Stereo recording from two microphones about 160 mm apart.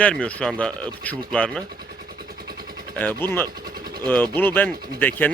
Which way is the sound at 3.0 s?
10° left (ahead or behind).